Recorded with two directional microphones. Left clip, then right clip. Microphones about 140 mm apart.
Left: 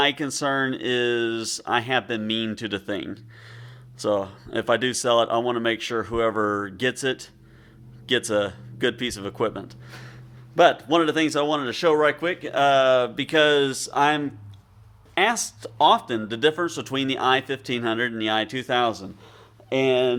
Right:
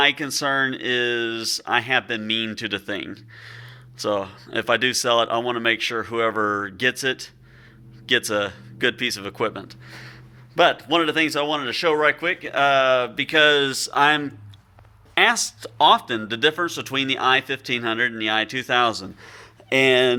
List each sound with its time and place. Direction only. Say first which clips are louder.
0.0 s speech: right 3 dB; 30° left (ahead or behind)
13.3 s speech: right 2 dB; 25° left (ahead or behind)
19.2 s a sound: right 6 dB; centre (ahead or behind)
19.9 s speech: right 2 dB; 15° right (ahead or behind)